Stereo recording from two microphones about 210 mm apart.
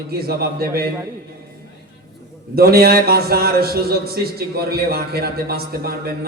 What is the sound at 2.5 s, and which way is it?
A man's voice, 45° right (ahead or behind).